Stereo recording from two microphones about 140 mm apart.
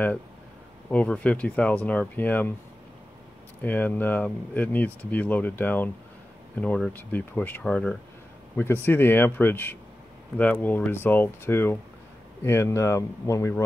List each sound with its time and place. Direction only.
0.8 s speech: 10° left (ahead or behind)
3.6 s speech: 10° left (ahead or behind)